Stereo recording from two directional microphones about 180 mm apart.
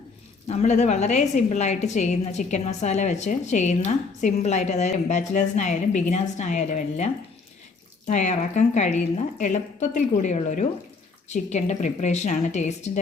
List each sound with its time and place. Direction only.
0.4 s a woman's voice: 35° left (ahead or behind)